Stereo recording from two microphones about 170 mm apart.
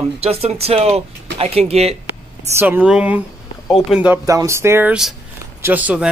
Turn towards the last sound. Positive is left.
turn(degrees=-10)  # may be behind; listen again after turning